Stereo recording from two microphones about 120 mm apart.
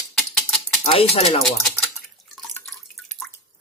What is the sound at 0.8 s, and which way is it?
Speech, 55° left (ahead or behind).